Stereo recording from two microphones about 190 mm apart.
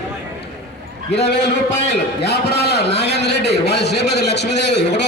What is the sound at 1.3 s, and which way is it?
A man's voice, 65° left (ahead or behind).